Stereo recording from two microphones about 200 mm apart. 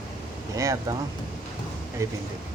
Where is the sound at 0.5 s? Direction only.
15° right (ahead or behind).